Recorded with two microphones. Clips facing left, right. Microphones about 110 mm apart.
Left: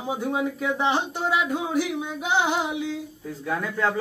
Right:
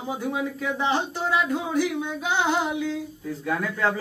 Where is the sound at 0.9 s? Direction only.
15° left (ahead or behind).